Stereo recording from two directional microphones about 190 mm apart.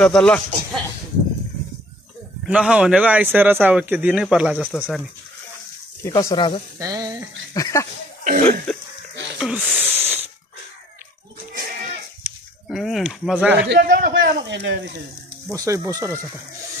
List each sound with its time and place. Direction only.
0.0 s a man's voice: 5° left (ahead or behind)
2.4 s a man's voice: 5° right (ahead or behind)
6.0 s speech: 20° left (ahead or behind)
6.8 s frying: 20° right (ahead or behind)
7.5 s a sound: 15° left (ahead or behind)
8.2 s cough: 40° right (ahead or behind)
8.7 s goat: centre (ahead or behind)
9.4 s a man's voice: 5° right (ahead or behind)
9.9 s wheeze: 10° right (ahead or behind)
12.2 s a sound: centre (ahead or behind)
13.7 s speech: 55° right (ahead or behind)
15.5 s speech: 15° right (ahead or behind)